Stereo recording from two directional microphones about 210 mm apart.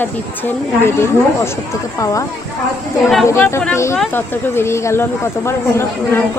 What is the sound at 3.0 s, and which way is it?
Speech, centre (ahead or behind).